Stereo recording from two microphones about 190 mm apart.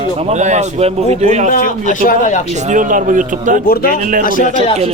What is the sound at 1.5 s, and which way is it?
Speech, 45° left (ahead or behind).